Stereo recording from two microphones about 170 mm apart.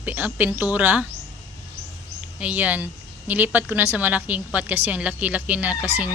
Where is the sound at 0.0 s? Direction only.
10° right (ahead or behind).